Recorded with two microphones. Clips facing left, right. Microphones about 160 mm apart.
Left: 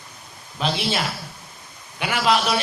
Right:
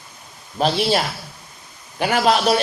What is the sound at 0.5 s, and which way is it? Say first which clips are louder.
Speech: right 6 dB; 45° right (ahead or behind).